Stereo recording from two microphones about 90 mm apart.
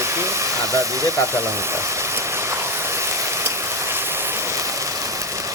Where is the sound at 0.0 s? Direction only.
30° right (ahead or behind).